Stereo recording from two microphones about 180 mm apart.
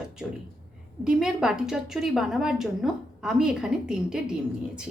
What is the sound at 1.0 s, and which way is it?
A woman's voice, 5° right (ahead or behind).